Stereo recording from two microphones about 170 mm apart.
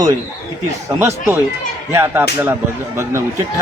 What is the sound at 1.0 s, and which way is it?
A man's voice, 15° right (ahead or behind).